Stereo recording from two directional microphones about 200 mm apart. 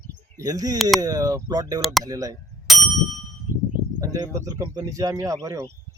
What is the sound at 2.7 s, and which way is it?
Ding, centre (ahead or behind).